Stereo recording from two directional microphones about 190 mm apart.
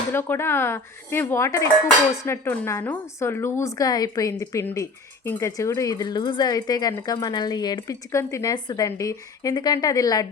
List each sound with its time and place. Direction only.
0.1 s a woman's voice: 10° left (ahead or behind)